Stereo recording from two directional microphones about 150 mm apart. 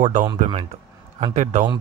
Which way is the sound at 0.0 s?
50° right (ahead or behind).